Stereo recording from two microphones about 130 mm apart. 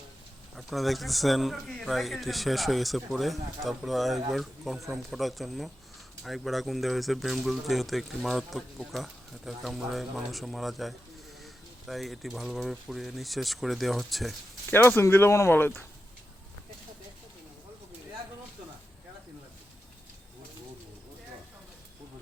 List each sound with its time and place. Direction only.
0.5 s a man's voice: centre (ahead or behind)
14.7 s speech: 15° left (ahead or behind)